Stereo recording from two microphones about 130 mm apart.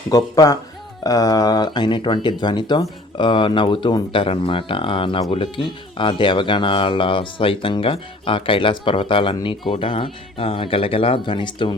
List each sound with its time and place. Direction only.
0.1 s speech: 30° left (ahead or behind)